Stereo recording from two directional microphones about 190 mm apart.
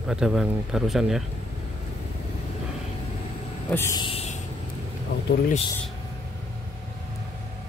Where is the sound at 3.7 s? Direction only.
15° left (ahead or behind).